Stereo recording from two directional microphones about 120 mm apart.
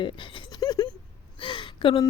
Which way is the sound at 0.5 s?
35° left (ahead or behind).